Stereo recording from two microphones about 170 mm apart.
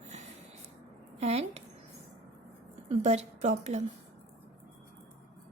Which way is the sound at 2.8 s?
40° right (ahead or behind).